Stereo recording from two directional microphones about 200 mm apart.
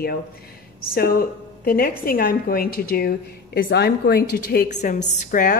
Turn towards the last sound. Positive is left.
turn(degrees=40)  # may be behind; listen again after turning